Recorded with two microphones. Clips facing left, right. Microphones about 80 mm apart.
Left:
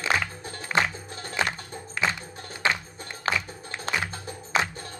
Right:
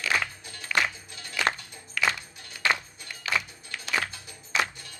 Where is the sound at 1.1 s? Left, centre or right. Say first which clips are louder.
Left 3 dB; left.